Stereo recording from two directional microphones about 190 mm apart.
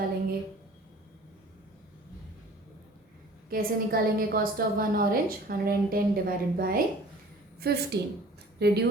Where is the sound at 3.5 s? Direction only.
50° right (ahead or behind).